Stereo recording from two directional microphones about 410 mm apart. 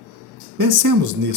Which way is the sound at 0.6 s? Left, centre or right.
Right.